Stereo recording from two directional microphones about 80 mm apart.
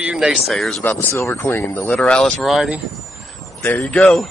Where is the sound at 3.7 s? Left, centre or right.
Left.